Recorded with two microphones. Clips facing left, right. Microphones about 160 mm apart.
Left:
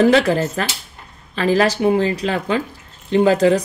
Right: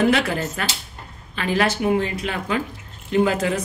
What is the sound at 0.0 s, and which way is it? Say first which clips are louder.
Speech: left 6 dB; 35° left (ahead or behind).